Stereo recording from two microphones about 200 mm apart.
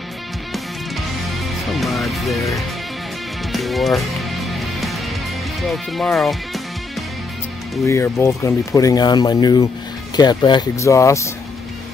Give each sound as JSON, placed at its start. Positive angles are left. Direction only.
{"t": 1.7, "sound": "music", "side_deg": 0}
{"t": 3.5, "sound": "music", "side_deg": 0}
{"t": 5.6, "sound": "speech", "side_deg": 0}
{"t": 7.8, "sound": "speech", "side_deg": 15}